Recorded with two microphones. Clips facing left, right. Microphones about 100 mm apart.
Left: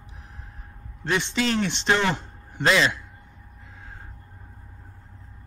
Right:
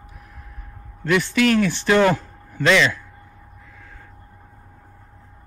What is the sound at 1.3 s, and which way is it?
Speech, 55° right (ahead or behind).